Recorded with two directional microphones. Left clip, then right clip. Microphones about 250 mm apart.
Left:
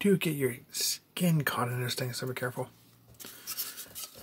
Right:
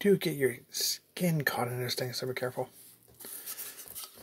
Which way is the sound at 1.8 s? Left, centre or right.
Left.